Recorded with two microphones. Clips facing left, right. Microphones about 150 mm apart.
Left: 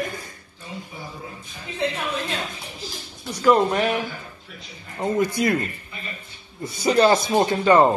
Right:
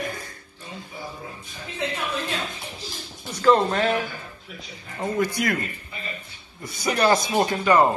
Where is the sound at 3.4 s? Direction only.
10° left (ahead or behind).